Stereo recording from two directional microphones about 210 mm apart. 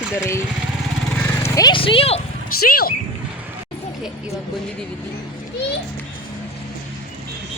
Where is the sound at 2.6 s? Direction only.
45° left (ahead or behind).